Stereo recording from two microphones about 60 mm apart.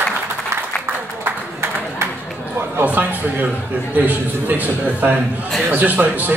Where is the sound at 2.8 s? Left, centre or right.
Right.